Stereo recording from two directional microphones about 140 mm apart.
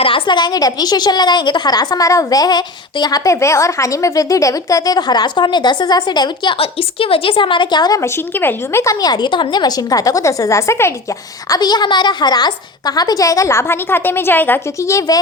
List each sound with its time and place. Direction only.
0.0 s a woman's voice: 35° left (ahead or behind)